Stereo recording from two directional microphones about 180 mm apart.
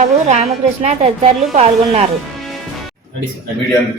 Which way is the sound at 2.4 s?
Centre (ahead or behind).